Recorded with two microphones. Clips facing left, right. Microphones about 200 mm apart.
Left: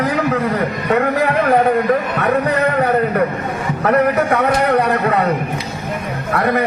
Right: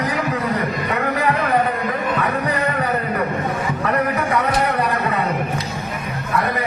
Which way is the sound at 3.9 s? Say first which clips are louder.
Left 6 dB; 60° left (ahead or behind).